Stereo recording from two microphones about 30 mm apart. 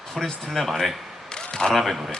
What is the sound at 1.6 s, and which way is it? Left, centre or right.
Speech, centre.